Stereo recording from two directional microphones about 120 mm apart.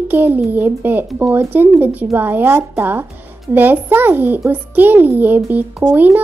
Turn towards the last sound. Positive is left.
turn(degrees=-15)  # may be behind; listen again after turning